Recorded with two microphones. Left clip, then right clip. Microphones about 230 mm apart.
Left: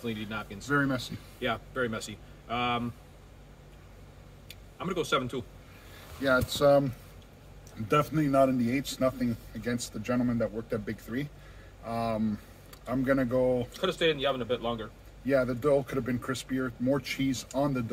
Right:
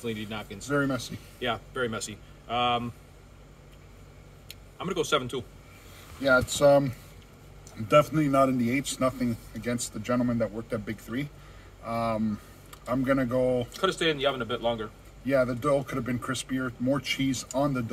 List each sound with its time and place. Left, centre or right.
0.0 s a man's voice: centre
0.8 s speech: centre
1.4 s a man's voice: centre
4.5 s speech: centre
6.2 s speech: centre
7.9 s a man's voice: centre
13.7 s a man's voice: right
15.2 s speech: centre